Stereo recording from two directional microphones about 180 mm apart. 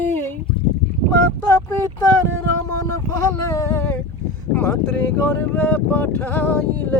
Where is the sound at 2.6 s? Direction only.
15° left (ahead or behind).